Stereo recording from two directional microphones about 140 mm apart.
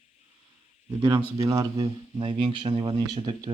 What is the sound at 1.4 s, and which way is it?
Speech, 25° right (ahead or behind).